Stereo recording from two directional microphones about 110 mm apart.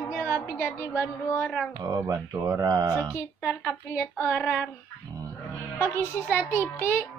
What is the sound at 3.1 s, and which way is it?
Speech, 20° left (ahead or behind).